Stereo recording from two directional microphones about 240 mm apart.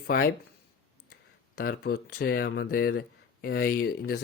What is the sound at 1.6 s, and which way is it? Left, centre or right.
Speech, left.